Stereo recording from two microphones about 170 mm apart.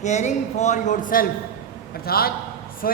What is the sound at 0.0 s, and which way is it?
A woman's voice, 45° left (ahead or behind).